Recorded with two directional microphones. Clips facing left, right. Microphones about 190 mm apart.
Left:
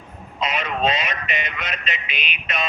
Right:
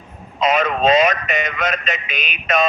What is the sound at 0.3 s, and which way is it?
Speech, 45° right (ahead or behind).